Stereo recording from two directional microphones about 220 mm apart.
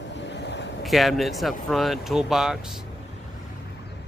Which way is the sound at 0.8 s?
Centre (ahead or behind).